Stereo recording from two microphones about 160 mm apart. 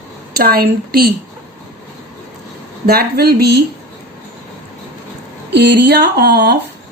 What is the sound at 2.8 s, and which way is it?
Speech, 75° right (ahead or behind).